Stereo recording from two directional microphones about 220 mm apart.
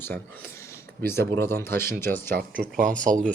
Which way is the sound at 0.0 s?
10° left (ahead or behind).